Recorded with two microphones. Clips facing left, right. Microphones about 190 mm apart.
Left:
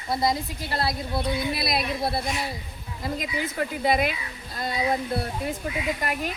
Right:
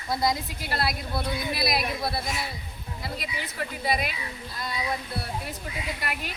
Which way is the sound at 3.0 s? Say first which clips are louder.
Left 6 dB; 45° left (ahead or behind).